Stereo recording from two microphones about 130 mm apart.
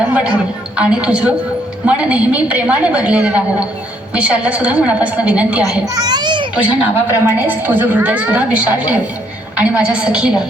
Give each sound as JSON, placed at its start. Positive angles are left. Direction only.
{"t": 0.8, "sound": "a woman's voice", "side_deg": -10}
{"t": 5.8, "sound": "a child's voice", "side_deg": -30}
{"t": 6.6, "sound": "a woman's voice", "side_deg": -15}